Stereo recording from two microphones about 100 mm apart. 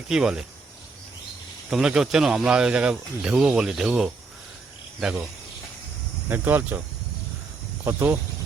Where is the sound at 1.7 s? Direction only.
5° right (ahead or behind).